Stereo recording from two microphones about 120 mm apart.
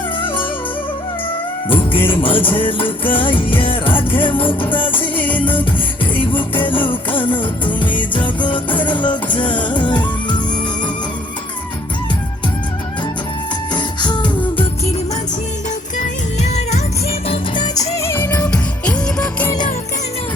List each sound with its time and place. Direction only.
1.6 s music: 45° left (ahead or behind)
13.7 s music: 40° left (ahead or behind)
16.0 s music: 70° left (ahead or behind); by 17.8 s 40° left (ahead or behind)
18.0 s music: 15° left (ahead or behind)